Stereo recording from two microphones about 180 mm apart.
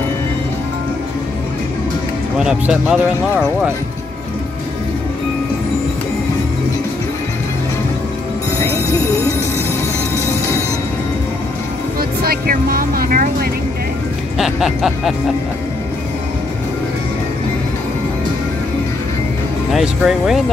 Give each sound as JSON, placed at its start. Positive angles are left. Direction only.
{"t": 2.3, "sound": "music", "side_deg": -5}
{"t": 8.5, "sound": "music", "side_deg": 15}
{"t": 12.0, "sound": "vehicle", "side_deg": -55}
{"t": 14.4, "sound": "music", "side_deg": 0}
{"t": 19.7, "sound": "music", "side_deg": -5}